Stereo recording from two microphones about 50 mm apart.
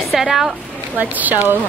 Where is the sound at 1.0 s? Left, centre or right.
Right.